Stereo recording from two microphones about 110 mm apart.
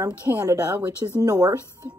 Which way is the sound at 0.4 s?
30° right (ahead or behind).